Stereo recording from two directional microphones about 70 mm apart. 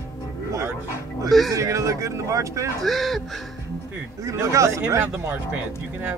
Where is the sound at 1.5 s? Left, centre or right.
Right.